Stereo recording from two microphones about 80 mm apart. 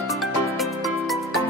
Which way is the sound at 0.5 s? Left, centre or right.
Centre.